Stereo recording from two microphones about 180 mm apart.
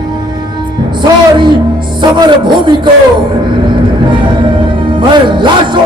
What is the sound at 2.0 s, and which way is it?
Music, 25° right (ahead or behind).